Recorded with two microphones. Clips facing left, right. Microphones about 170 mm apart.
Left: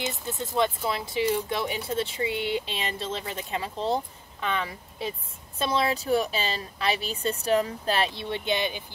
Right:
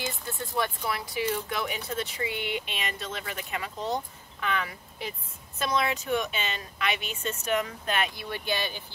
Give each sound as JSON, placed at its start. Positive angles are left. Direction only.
{"t": 0.6, "sound": "a woman's voice", "side_deg": 25}